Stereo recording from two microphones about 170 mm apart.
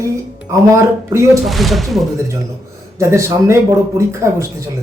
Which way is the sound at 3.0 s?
15° right (ahead or behind).